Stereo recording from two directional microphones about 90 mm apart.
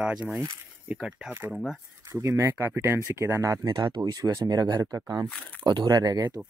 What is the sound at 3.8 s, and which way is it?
Speech, 55° right (ahead or behind).